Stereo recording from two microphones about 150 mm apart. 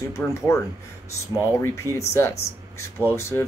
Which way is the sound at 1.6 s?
15° left (ahead or behind).